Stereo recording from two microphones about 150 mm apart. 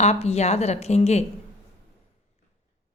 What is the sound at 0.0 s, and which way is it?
A woman's voice, 45° left (ahead or behind).